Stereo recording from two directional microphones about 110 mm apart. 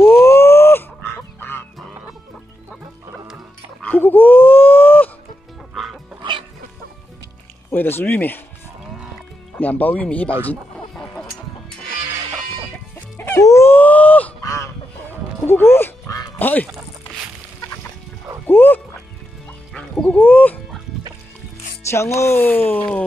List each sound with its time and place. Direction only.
0.0 s honk: 25° left (ahead or behind)
3.8 s a sound: 15° left (ahead or behind)
5.8 s music: centre (ahead or behind)
7.7 s speech: 15° left (ahead or behind)
9.6 s speech: 15° left (ahead or behind)
13.4 s wail: 25° left (ahead or behind)
14.4 s a sound: 25° left (ahead or behind)
15.4 s music: 20° left (ahead or behind)
16.3 s quack: 15° left (ahead or behind)
18.5 s music: 15° left (ahead or behind)
19.7 s dog: 10° left (ahead or behind)
21.9 s speech: 25° left (ahead or behind)